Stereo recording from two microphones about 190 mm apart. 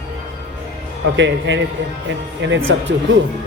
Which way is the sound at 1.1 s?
70° right (ahead or behind).